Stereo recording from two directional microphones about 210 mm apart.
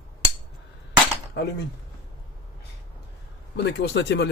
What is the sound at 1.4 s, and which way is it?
Speech, 55° left (ahead or behind).